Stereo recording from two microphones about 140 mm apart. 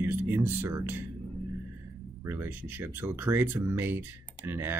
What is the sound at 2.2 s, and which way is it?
Speech, 15° right (ahead or behind).